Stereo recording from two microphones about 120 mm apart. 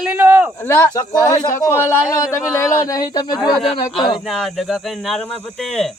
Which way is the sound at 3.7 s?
40° left (ahead or behind).